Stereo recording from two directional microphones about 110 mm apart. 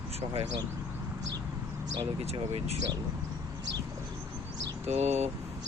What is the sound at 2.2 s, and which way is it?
Speech, 75° right (ahead or behind).